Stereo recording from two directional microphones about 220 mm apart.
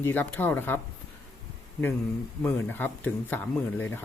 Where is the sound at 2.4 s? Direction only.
10° left (ahead or behind).